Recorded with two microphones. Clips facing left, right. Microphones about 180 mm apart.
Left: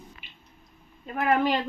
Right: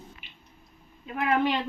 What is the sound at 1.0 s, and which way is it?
Speech, 45° left (ahead or behind).